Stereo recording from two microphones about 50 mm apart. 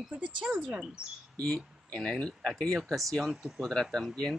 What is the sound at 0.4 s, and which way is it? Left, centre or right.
Speech, centre.